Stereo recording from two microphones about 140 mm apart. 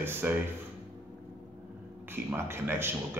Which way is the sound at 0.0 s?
15° right (ahead or behind).